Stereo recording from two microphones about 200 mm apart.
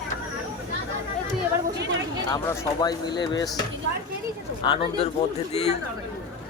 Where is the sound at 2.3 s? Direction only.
20° left (ahead or behind).